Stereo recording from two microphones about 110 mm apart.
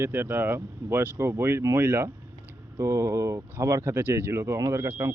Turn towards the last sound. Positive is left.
turn(degrees=-25)  # may be behind; listen again after turning